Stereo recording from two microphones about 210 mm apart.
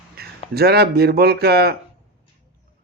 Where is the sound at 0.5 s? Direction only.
50° right (ahead or behind).